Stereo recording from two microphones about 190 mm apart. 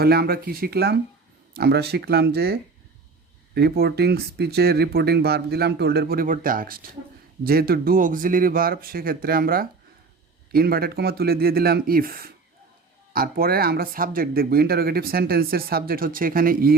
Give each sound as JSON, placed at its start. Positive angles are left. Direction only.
{"t": 0.0, "sound": "speech", "side_deg": -55}